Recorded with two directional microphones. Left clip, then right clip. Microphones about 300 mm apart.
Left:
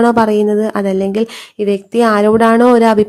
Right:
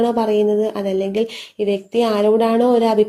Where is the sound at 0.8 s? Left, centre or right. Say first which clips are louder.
Left 4 dB; left.